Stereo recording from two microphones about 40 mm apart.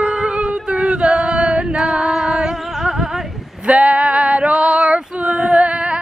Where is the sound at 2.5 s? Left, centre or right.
Centre.